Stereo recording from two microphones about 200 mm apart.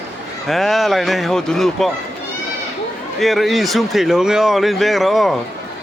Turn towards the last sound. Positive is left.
turn(degrees=0)  # may be behind; listen again after turning